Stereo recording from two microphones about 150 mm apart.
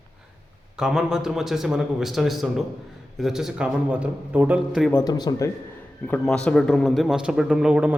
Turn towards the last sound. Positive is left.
turn(degrees=-10)  # may be behind; listen again after turning